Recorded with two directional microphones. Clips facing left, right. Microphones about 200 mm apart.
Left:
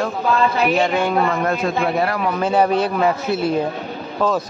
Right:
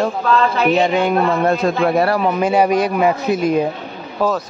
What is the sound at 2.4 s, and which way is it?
A man's voice, 15° right (ahead or behind).